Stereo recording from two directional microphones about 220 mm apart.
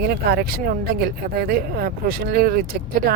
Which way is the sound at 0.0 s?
45° right (ahead or behind).